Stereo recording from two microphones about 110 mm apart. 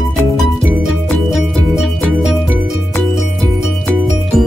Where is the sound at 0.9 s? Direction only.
Centre (ahead or behind).